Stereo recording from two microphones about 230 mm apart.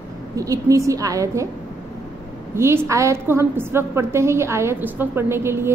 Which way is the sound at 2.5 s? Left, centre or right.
Centre.